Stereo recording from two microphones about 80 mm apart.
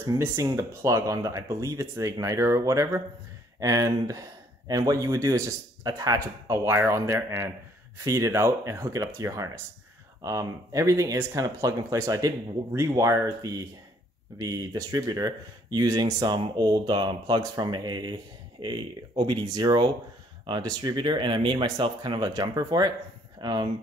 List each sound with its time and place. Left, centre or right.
0.0 s speech: right